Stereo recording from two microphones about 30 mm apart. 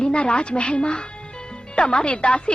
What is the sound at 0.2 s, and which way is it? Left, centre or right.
Speech, left.